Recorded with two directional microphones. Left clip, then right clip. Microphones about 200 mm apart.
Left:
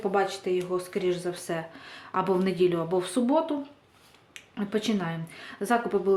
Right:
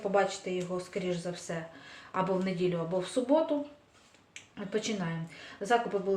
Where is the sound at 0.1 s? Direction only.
40° left (ahead or behind).